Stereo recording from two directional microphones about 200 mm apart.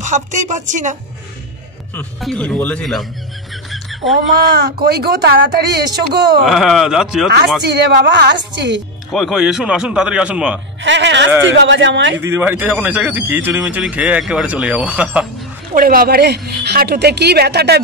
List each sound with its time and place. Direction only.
0.0 s speech: 40° right (ahead or behind)
2.0 s speech: 5° left (ahead or behind)
3.7 s a sound: centre (ahead or behind)
4.6 s a woman's voice: 55° right (ahead or behind)
6.4 s speech: centre (ahead or behind)
7.9 s a woman's voice: 55° right (ahead or behind)
9.1 s speech: centre (ahead or behind)
10.8 s a woman's voice: 65° right (ahead or behind)
12.2 s speech: 10° right (ahead or behind)
15.7 s a woman's voice: 45° right (ahead or behind)